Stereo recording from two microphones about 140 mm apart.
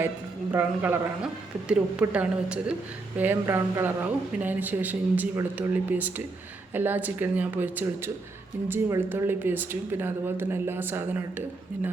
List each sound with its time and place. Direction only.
0.5 s a woman's voice: 15° right (ahead or behind)